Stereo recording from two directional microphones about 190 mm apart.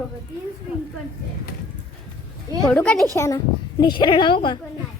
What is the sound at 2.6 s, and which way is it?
Speech, 5° left (ahead or behind).